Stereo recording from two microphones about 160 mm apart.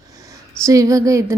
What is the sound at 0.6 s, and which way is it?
Speech, 20° right (ahead or behind).